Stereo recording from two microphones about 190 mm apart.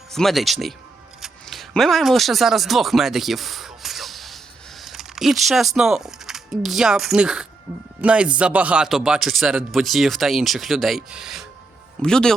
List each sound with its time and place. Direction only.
0.1 s speech: centre (ahead or behind)